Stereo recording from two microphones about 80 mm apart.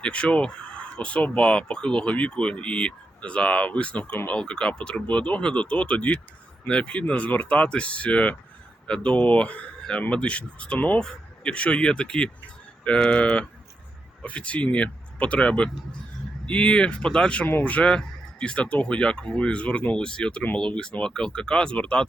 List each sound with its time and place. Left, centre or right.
0.0 s speech: centre